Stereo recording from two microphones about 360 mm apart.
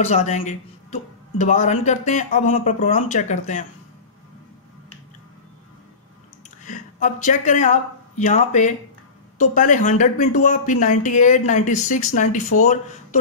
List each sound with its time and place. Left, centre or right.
0.0 s speech: centre
6.6 s speech: left